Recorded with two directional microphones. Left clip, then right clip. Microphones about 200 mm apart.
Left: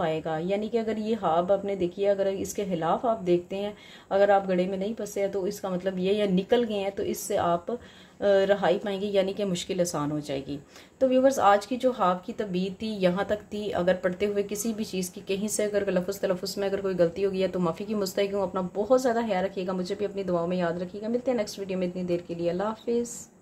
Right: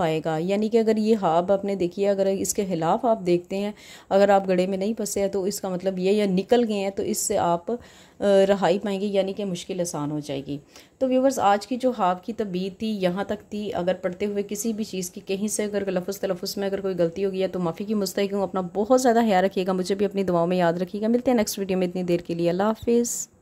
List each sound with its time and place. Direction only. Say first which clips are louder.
0.0 s speech: right 4 dB; 30° right (ahead or behind)